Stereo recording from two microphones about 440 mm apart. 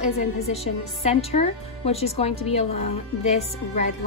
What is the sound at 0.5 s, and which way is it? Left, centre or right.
A woman's voice, centre.